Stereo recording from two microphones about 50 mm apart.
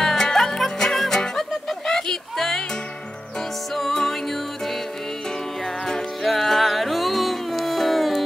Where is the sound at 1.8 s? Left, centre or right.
Centre.